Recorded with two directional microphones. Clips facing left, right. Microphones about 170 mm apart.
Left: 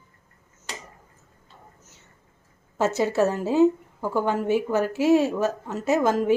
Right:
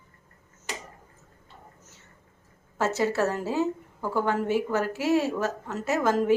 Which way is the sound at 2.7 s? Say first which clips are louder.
Left 3 dB; 20° left (ahead or behind).